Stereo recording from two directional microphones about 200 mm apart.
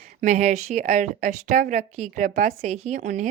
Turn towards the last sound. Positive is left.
turn(degrees=-40)  # may be behind; listen again after turning